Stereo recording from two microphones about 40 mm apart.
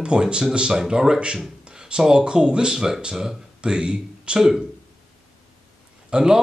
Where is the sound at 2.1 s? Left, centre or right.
Right.